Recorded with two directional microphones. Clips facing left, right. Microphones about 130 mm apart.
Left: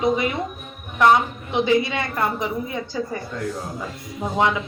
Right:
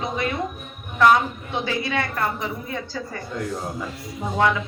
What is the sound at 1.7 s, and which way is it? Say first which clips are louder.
A woman's voice: left 5 dB; 20° left (ahead or behind).